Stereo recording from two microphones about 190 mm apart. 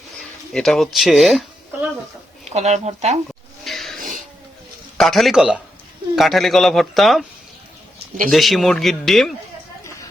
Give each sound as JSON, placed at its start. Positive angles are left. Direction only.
{"t": 0.2, "sound": "a sound", "side_deg": 0}
{"t": 0.9, "sound": "speech", "side_deg": 0}
{"t": 2.4, "sound": "speech", "side_deg": -35}
{"t": 3.6, "sound": "a sound", "side_deg": 0}
{"t": 4.9, "sound": "a man's voice", "side_deg": 0}
{"t": 8.3, "sound": "a man's voice", "side_deg": 0}